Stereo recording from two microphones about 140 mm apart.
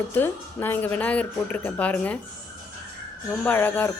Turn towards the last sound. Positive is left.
turn(degrees=10)  # may be behind; listen again after turning